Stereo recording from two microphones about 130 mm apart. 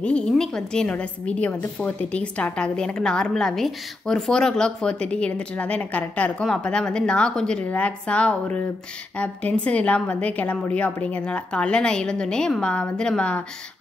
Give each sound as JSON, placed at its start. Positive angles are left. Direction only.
{"t": 0.0, "sound": "a woman's voice", "side_deg": 5}